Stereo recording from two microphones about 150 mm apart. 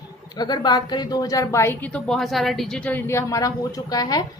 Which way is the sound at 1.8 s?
5° left (ahead or behind).